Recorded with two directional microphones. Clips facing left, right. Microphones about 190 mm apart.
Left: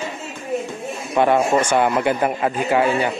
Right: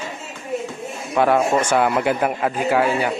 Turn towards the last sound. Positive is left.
turn(degrees=0)  # may be behind; listen again after turning